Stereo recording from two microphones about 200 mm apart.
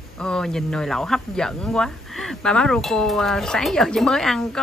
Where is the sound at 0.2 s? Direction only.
5° left (ahead or behind).